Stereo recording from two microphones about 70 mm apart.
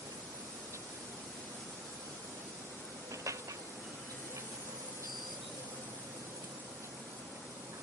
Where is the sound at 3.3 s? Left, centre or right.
Right.